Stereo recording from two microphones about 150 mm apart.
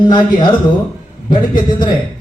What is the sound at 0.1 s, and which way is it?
A man's voice, 30° left (ahead or behind).